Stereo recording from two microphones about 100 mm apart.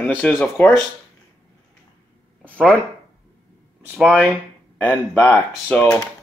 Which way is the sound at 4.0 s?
15° right (ahead or behind).